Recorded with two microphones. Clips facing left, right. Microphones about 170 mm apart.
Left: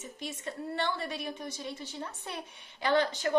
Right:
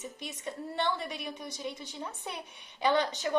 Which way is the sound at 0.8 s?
15° right (ahead or behind).